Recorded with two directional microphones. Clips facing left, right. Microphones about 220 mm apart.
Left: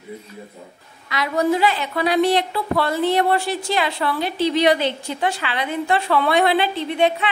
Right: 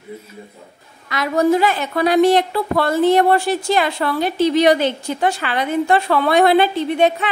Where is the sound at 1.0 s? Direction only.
45° right (ahead or behind).